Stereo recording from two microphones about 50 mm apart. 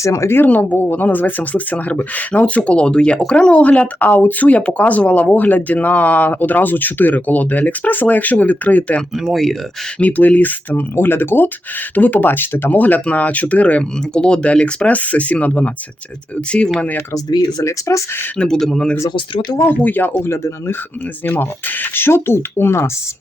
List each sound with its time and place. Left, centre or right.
0.0 s speech: left
0.3 s speech: left
0.5 s speech: left
9.1 s speech: centre
10.0 s speech: left
10.9 s speech: left
11.9 s speech: left
12.8 s speech: left
14.1 s speech: centre
17.6 s speech: left
18.3 s speech: centre
19.6 s speech: left
20.2 s speech: left
21.2 s speech: left